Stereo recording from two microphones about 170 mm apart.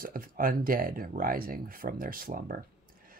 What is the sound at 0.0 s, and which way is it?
Speech, 55° right (ahead or behind).